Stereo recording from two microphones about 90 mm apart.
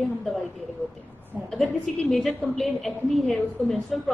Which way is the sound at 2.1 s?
Centre (ahead or behind).